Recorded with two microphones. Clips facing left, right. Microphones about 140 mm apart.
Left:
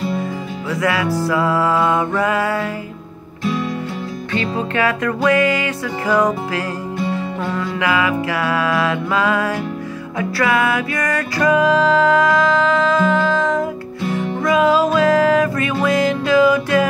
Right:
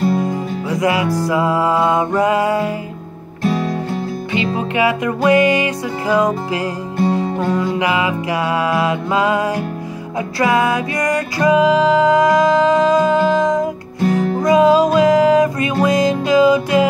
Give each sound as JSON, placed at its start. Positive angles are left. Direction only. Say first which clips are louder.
{"t": 0.0, "sound": "music", "louder": "right 5 dB", "side_deg": -40}
{"t": 0.7, "sound": "music", "louder": "right 2 dB", "side_deg": -15}
{"t": 3.4, "sound": "music", "louder": "right 3 dB", "side_deg": -40}
{"t": 4.3, "sound": "music", "louder": "right 1 dB", "side_deg": -15}
{"t": 7.0, "sound": "music", "louder": "right 7 dB", "side_deg": -40}
{"t": 7.5, "sound": "music", "louder": "even", "side_deg": -15}
{"t": 14.0, "sound": "music", "louder": "right 5 dB", "side_deg": -40}
{"t": 14.5, "sound": "music", "louder": "right 3 dB", "side_deg": -20}